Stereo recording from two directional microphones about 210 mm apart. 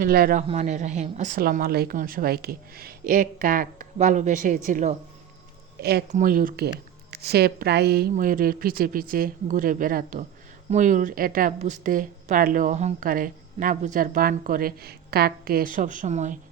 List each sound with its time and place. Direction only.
0.0 s speech: 45° right (ahead or behind)
0.4 s a woman's voice: 35° right (ahead or behind)
5.8 s speech: 50° right (ahead or behind)
6.1 s a woman's voice: 40° right (ahead or behind)